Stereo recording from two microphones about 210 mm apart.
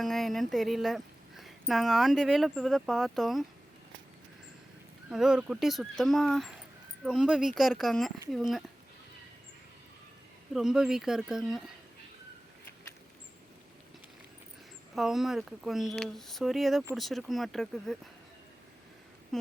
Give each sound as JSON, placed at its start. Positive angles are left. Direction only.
{"t": 0.0, "sound": "speech", "side_deg": 0}
{"t": 5.1, "sound": "speech", "side_deg": -5}
{"t": 10.5, "sound": "speech", "side_deg": 0}
{"t": 14.9, "sound": "speech", "side_deg": 0}
{"t": 19.3, "sound": "a sound", "side_deg": 0}